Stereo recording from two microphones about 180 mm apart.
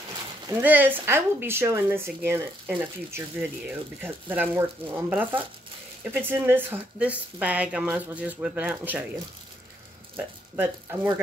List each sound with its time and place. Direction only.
0.5 s speech: 10° right (ahead or behind)
10.1 s speech: 10° right (ahead or behind)